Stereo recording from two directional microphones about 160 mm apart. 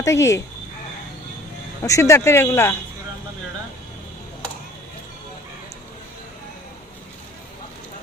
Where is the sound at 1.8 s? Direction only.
20° left (ahead or behind).